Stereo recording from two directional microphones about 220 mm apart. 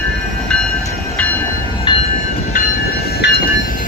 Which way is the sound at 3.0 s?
45° left (ahead or behind).